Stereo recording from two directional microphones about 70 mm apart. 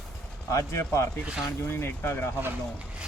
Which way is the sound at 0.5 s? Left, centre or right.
Left.